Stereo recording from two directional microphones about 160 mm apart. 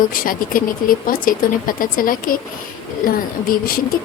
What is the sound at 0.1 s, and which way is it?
Speech, 60° left (ahead or behind).